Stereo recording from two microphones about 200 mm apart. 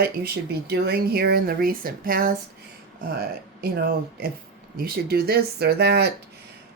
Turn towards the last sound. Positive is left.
turn(degrees=-55)  # may be behind; listen again after turning